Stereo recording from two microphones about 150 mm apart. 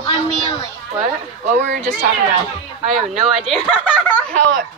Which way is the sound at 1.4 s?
50° right (ahead or behind).